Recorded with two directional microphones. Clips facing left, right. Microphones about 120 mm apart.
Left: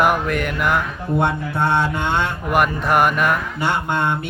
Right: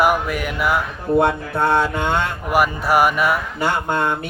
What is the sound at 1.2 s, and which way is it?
Mantra, 40° right (ahead or behind).